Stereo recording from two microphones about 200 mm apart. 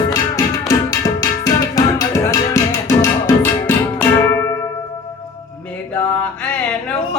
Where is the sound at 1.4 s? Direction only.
15° left (ahead or behind).